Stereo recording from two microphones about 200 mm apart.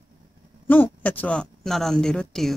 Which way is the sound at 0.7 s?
10° left (ahead or behind).